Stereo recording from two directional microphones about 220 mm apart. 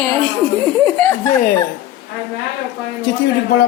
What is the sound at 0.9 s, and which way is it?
Speech, 10° left (ahead or behind).